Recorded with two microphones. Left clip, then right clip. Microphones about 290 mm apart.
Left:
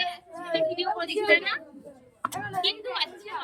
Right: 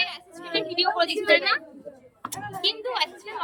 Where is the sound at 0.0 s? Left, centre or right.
Right.